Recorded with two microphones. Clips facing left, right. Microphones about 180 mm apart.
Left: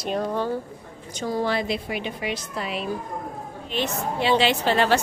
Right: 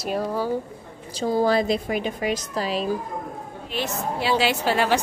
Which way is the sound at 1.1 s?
30° right (ahead or behind).